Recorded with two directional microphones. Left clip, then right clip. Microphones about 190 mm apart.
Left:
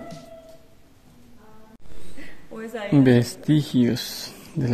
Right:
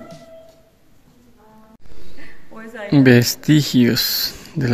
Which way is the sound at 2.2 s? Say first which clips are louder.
Left 2 dB; 55° left (ahead or behind).